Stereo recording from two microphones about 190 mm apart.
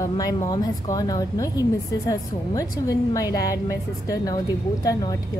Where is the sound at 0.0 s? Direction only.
20° left (ahead or behind).